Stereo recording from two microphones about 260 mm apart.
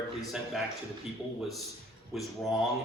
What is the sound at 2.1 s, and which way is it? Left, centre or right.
Speech, centre.